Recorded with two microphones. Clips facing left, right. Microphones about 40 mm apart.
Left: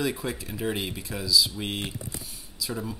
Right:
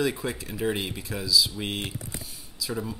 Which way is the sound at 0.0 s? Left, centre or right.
Centre.